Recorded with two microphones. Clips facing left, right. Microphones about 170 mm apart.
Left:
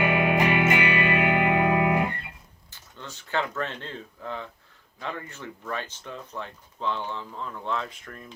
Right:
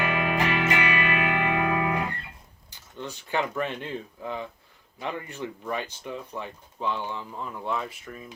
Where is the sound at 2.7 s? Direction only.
15° right (ahead or behind).